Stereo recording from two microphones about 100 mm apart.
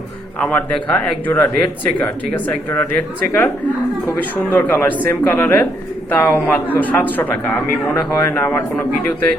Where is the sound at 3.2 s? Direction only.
20° left (ahead or behind).